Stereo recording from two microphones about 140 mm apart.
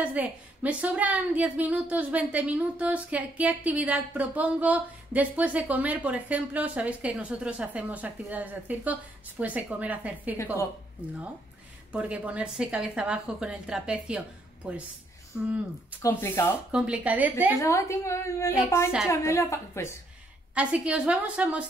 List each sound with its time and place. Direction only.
0.0 s a woman's voice: 10° right (ahead or behind)
10.3 s a woman's voice: 20° left (ahead or behind)
11.9 s a woman's voice: 10° right (ahead or behind)
16.0 s speech: 15° left (ahead or behind)
16.7 s a woman's voice: 10° right (ahead or behind)
17.6 s a woman's voice: 20° left (ahead or behind)
20.5 s a woman's voice: 10° right (ahead or behind)